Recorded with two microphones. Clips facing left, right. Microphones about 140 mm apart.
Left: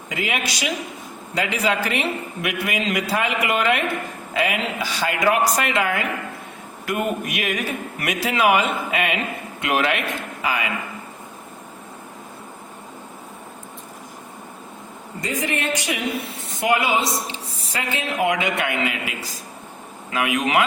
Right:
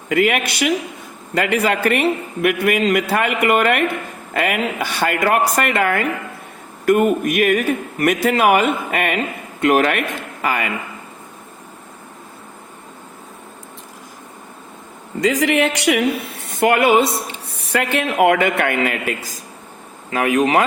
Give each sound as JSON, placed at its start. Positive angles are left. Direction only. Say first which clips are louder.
{"t": 0.1, "sound": "a man's voice", "louder": "right 9 dB", "side_deg": -60}
{"t": 15.2, "sound": "speech", "louder": "right 9 dB", "side_deg": -90}
{"t": 16.5, "sound": "a man's voice", "louder": "right 7 dB", "side_deg": -55}
{"t": 20.1, "sound": "speech", "louder": "right 6 dB", "side_deg": -40}